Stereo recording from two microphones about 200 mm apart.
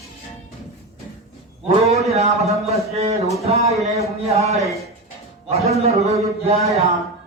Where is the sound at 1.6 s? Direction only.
30° right (ahead or behind).